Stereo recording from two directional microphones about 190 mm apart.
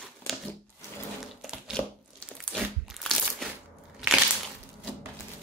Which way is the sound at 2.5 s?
Centre (ahead or behind).